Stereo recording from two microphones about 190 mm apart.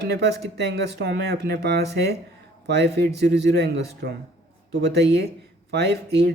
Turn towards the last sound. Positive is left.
turn(degrees=-60)  # may be behind; listen again after turning